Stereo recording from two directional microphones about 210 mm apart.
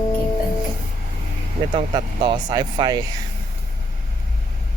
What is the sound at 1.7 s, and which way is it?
Speech, 25° right (ahead or behind).